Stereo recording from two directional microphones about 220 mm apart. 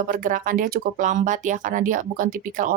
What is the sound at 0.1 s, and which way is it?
Speech, 40° right (ahead or behind).